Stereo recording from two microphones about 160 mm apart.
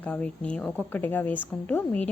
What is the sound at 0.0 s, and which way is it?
Speech, 5° left (ahead or behind).